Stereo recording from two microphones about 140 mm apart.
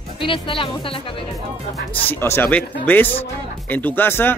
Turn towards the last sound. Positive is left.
turn(degrees=15)  # may be behind; listen again after turning